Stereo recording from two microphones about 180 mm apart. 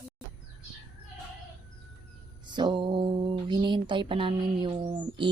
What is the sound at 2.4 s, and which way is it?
Mantra, 25° right (ahead or behind).